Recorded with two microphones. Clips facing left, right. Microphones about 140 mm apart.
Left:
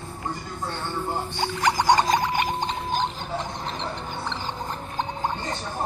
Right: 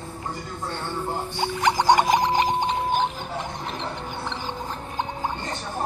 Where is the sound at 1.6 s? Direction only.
25° right (ahead or behind).